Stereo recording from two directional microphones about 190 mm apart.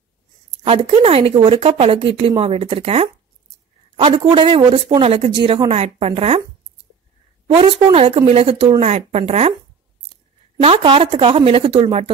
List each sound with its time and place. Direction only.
0.7 s a woman's voice: 30° right (ahead or behind)
7.4 s speech: 30° right (ahead or behind)
10.6 s a woman's voice: 30° right (ahead or behind)